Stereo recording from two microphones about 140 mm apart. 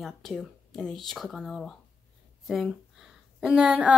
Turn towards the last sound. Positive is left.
turn(degrees=-10)  # may be behind; listen again after turning